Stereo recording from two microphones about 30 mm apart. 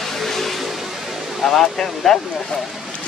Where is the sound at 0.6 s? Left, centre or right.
Centre.